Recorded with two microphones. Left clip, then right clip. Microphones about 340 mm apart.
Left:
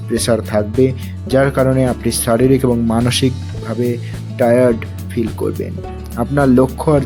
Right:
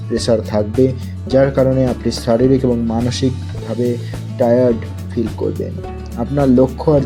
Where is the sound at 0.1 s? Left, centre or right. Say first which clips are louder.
Even; centre.